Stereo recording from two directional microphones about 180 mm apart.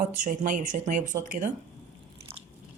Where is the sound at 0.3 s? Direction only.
45° right (ahead or behind).